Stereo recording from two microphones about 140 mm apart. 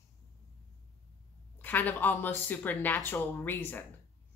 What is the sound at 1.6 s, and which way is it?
Speech, 10° left (ahead or behind).